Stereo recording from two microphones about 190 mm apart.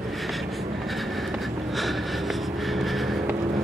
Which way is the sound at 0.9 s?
Centre (ahead or behind).